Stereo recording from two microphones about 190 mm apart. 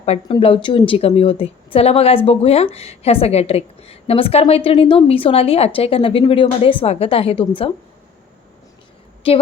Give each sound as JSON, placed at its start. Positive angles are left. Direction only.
{"t": 0.0, "sound": "a woman's voice", "side_deg": 30}
{"t": 9.2, "sound": "a woman's voice", "side_deg": 30}